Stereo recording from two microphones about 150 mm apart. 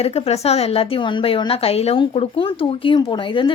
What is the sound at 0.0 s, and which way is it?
A woman's voice, 45° left (ahead or behind).